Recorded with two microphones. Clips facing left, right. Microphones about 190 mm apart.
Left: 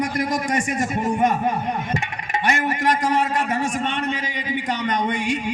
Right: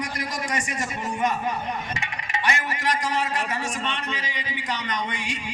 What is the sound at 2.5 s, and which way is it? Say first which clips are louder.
A man's voice: left 6 dB; 50° left (ahead or behind).